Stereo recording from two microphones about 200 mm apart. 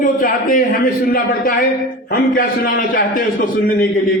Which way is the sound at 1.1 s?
45° left (ahead or behind).